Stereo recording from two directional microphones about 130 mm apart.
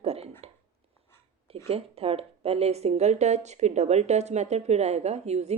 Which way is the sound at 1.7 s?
50° right (ahead or behind).